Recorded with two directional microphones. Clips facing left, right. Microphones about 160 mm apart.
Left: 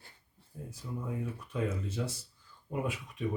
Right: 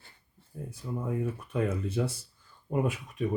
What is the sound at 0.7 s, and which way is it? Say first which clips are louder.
Speech: right 5 dB; 55° right (ahead or behind).